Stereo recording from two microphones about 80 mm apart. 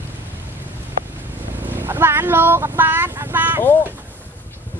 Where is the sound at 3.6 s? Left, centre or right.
Left.